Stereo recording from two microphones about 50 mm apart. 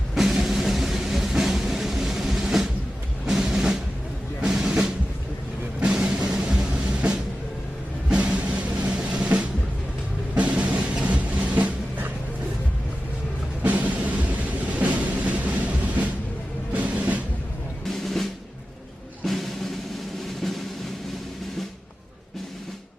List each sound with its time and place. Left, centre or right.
0.1 s music: centre
4.4 s drum: centre
5.8 s music: right
13.6 s music: right
16.7 s music: right
17.8 s drum: centre
19.2 s music: centre